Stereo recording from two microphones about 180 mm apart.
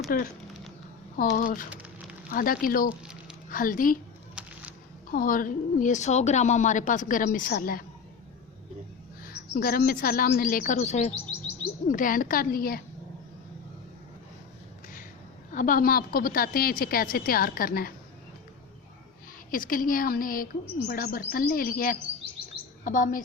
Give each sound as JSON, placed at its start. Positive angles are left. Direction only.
{"t": 0.1, "sound": "a woman's voice", "side_deg": 50}
{"t": 4.4, "sound": "a sound", "side_deg": -5}
{"t": 5.1, "sound": "a woman's voice", "side_deg": 50}
{"t": 9.2, "sound": "a woman's voice", "side_deg": 55}
{"t": 15.5, "sound": "a woman's voice", "side_deg": 50}
{"t": 19.5, "sound": "a woman's voice", "side_deg": 50}